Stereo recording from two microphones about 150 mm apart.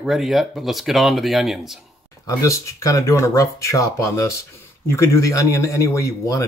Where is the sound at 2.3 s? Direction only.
20° left (ahead or behind).